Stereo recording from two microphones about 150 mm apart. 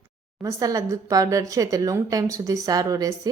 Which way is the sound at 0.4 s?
20° right (ahead or behind).